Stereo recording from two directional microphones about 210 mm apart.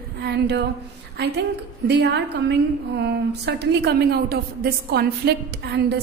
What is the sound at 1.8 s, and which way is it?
A woman's voice, 50° right (ahead or behind).